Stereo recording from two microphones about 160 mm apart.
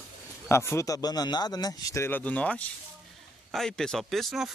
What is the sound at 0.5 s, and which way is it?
Speech, 15° left (ahead or behind).